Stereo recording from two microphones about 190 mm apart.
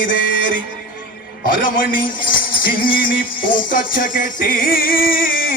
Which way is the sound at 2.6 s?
50° left (ahead or behind).